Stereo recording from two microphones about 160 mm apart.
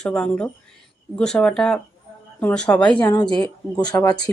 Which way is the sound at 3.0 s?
25° left (ahead or behind).